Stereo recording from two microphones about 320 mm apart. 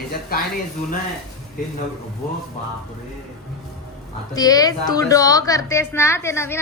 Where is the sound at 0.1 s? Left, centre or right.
Left.